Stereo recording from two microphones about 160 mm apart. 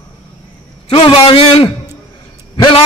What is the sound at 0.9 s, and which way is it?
A man's voice, 35° left (ahead or behind).